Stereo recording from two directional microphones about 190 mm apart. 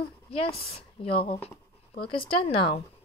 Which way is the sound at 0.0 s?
30° left (ahead or behind).